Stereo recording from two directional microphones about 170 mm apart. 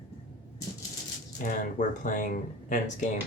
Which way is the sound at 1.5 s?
50° left (ahead or behind).